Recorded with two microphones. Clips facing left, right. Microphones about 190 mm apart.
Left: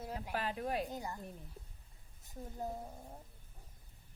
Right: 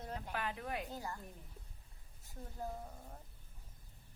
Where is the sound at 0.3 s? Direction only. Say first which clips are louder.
Left 5 dB; 35° left (ahead or behind).